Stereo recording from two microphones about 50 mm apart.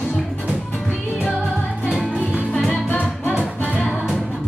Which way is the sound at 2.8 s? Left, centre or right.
Left.